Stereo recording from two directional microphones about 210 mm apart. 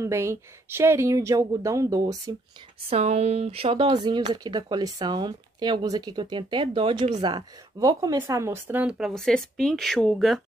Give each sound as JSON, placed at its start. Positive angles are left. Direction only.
{"t": 0.0, "sound": "speech", "side_deg": -15}
{"t": 2.9, "sound": "speech", "side_deg": -30}